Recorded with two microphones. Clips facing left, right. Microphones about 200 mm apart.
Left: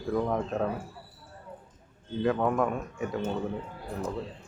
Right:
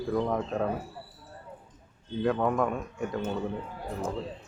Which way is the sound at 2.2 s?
Centre (ahead or behind).